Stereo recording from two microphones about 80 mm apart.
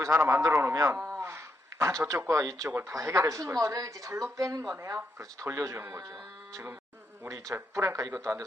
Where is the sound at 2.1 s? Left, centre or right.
Right.